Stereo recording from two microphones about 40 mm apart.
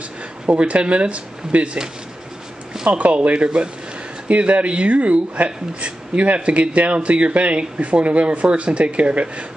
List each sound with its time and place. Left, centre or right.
0.5 s speech: right
2.9 s speech: right